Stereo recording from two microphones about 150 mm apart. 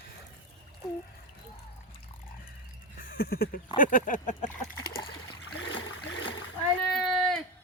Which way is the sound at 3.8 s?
65° left (ahead or behind).